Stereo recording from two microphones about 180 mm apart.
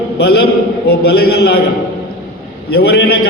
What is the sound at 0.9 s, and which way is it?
Speech, 60° left (ahead or behind).